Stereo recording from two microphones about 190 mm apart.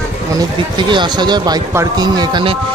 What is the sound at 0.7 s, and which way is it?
Speech, 25° right (ahead or behind).